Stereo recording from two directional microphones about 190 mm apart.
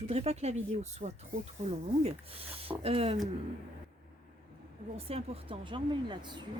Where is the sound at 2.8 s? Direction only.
30° right (ahead or behind).